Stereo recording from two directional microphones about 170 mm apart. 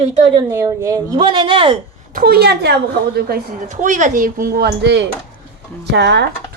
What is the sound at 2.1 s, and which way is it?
A child's voice, 60° right (ahead or behind).